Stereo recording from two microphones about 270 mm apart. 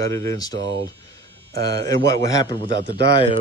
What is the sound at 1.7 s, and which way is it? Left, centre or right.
Speech, centre.